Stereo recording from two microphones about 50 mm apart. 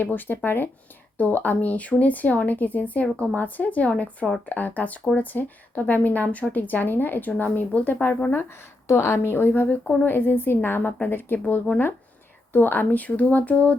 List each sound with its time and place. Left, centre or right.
0.0 s a woman's voice: left
8.4 s a woman's voice: left